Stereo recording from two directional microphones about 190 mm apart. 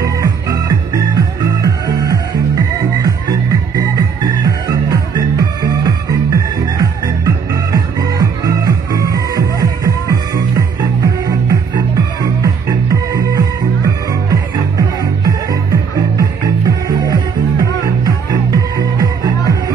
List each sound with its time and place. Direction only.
0.0 s music: 20° right (ahead or behind)